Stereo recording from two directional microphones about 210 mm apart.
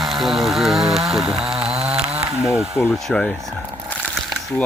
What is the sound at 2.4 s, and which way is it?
Speech, centre (ahead or behind).